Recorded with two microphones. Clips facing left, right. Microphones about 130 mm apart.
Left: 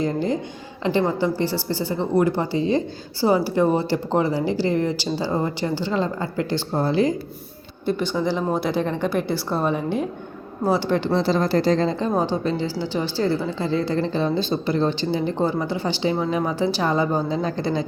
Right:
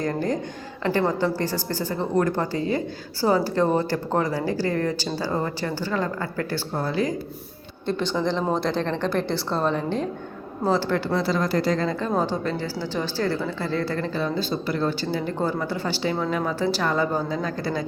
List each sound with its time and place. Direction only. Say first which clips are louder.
0.0 s a woman's voice: left 2 dB; 15° left (ahead or behind)
7.9 s a woman's voice: left 2 dB; 5° left (ahead or behind); by 17.8 s 25° left (ahead or behind)